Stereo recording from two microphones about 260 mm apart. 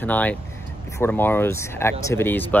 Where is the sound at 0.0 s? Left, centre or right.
Centre.